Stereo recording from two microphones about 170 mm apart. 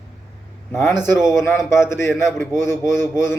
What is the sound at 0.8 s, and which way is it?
A man's voice, 15° left (ahead or behind).